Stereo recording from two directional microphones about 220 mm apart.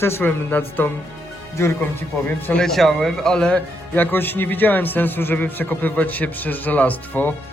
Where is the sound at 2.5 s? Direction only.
5° left (ahead or behind).